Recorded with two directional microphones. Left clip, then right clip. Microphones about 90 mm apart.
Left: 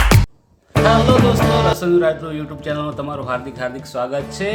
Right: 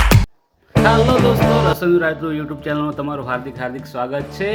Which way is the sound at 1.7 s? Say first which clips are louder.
Left 1 dB; 40° right (ahead or behind).